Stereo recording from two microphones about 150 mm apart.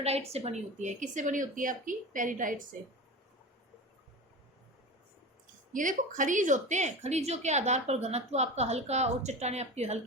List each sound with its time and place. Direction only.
0.0 s speech: 45° right (ahead or behind); by 2.6 s 60° right (ahead or behind)
5.7 s a woman's voice: 60° right (ahead or behind)